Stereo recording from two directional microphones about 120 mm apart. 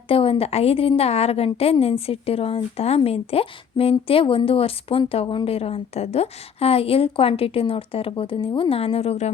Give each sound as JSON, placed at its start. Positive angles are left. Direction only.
{"t": 0.1, "sound": "a woman's voice", "side_deg": 50}